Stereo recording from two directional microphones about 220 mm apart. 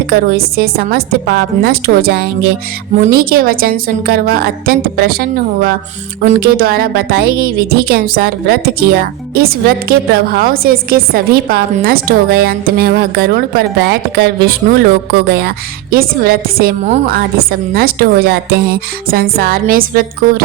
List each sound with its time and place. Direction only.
0.1 s a woman's voice: 45° right (ahead or behind)